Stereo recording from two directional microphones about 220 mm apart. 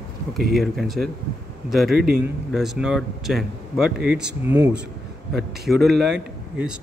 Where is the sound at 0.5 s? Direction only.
Centre (ahead or behind).